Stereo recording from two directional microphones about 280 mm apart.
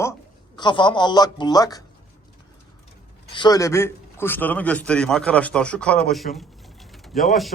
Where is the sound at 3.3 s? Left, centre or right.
Centre.